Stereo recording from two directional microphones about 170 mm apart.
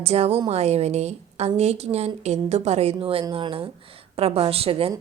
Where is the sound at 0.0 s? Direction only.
35° right (ahead or behind).